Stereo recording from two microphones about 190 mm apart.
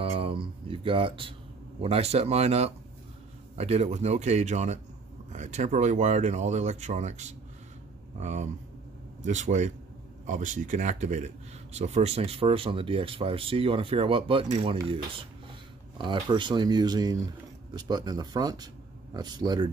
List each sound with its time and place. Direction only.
0.0 s speech: 30° right (ahead or behind)